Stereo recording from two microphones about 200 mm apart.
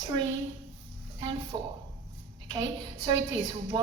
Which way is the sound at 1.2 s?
25° right (ahead or behind).